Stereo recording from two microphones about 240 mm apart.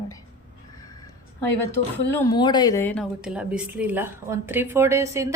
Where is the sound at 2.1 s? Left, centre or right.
Centre.